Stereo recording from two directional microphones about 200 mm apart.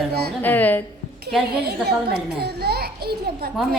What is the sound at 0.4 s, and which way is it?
A woman's voice, 10° left (ahead or behind).